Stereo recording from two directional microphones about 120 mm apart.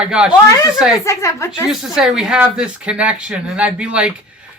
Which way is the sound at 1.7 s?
5° right (ahead or behind).